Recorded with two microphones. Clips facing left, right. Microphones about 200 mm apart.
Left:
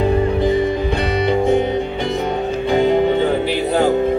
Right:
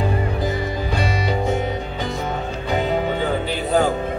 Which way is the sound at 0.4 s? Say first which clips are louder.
Left 8 dB; 25° left (ahead or behind).